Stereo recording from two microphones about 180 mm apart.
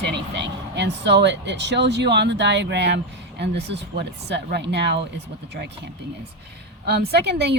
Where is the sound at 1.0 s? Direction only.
75° right (ahead or behind).